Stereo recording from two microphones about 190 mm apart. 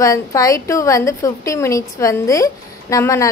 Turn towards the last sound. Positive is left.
turn(degrees=15)  # may be behind; listen again after turning